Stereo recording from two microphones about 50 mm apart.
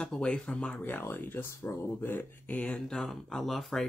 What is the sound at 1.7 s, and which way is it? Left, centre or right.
Speech, left.